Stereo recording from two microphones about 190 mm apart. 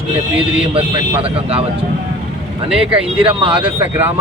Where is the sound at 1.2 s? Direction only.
30° right (ahead or behind).